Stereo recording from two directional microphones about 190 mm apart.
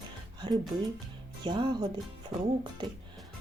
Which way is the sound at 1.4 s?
25° right (ahead or behind).